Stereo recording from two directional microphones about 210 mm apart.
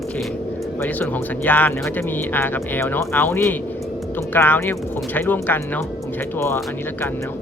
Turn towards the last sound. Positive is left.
turn(degrees=10)  # may be behind; listen again after turning